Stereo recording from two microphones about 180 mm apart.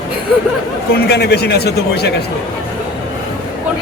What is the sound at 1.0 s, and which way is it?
A man's voice, 65° left (ahead or behind).